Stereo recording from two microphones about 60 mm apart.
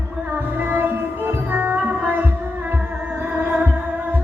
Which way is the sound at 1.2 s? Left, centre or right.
Right.